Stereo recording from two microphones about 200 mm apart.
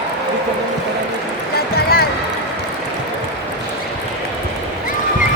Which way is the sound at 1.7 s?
50° left (ahead or behind).